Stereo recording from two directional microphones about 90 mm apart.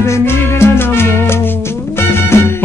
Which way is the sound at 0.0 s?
30° left (ahead or behind).